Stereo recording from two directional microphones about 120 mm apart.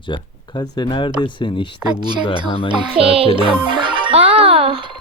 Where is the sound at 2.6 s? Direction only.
50° right (ahead or behind).